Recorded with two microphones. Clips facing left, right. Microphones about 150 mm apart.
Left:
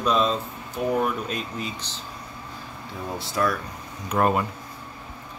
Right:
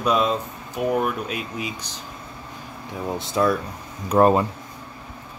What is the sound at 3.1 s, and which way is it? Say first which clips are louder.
Speech: right 4 dB; 20° right (ahead or behind).